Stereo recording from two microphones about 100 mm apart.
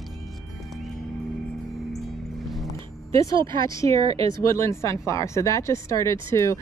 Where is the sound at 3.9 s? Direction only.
75° right (ahead or behind).